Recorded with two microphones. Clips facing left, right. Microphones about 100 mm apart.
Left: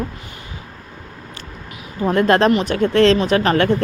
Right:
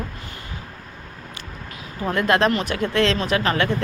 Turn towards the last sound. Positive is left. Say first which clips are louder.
# left 5 dB
turn(degrees=40)  # may be behind; listen again after turning